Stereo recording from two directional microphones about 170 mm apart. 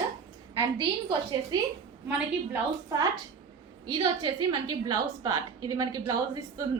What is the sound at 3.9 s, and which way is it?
A woman's voice, 25° right (ahead or behind).